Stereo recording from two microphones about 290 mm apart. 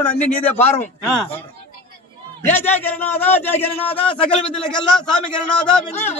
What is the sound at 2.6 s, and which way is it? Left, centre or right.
A man's voice, centre.